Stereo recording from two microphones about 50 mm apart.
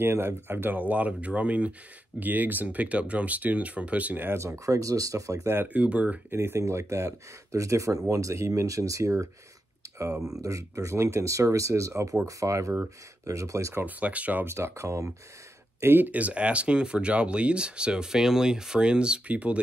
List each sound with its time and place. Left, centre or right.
0.0 s speech: right
2.1 s speech: right
4.3 s speech: right
5.7 s speech: right
6.3 s speech: right
6.6 s speech: right
10.4 s speech: right
13.2 s speech: right
13.8 s speech: right
14.4 s speech: right
15.8 s speech: right
16.1 s speech: right